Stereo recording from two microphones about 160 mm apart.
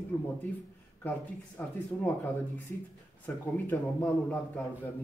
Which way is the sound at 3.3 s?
15° left (ahead or behind).